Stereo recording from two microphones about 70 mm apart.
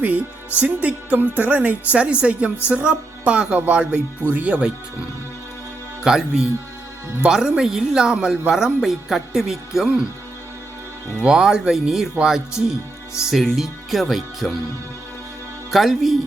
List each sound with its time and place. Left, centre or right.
0.0 s speech: right
11.2 s speech: centre
15.7 s speech: centre